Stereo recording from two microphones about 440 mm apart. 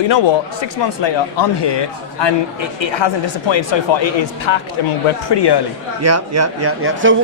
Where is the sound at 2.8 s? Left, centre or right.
Left.